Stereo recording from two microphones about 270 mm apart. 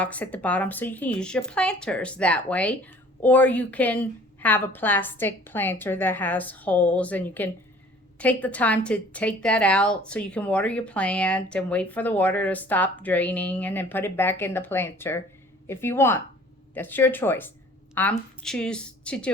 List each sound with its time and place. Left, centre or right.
0.0 s speech: centre